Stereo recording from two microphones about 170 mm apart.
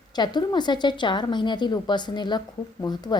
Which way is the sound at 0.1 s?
25° left (ahead or behind).